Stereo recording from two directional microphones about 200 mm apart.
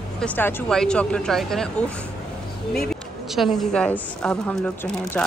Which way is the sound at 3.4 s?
5° left (ahead or behind).